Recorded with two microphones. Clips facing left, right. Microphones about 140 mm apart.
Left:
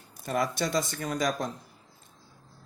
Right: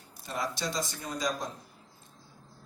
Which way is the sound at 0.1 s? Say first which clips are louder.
Left 6 dB; 50° left (ahead or behind).